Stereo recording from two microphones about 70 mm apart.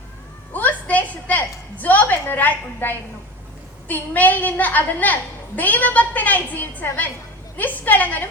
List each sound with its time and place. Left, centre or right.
0.5 s a woman's voice: left